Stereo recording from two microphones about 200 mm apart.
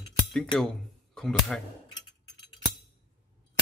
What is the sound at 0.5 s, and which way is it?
Speech, 5° left (ahead or behind).